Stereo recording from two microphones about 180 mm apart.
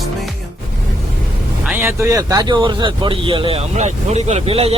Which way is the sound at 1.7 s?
15° right (ahead or behind).